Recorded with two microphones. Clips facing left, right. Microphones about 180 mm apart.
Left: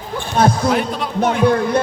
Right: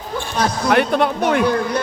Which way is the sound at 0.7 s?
65° right (ahead or behind).